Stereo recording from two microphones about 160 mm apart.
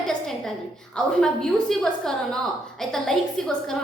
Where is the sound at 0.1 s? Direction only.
Centre (ahead or behind).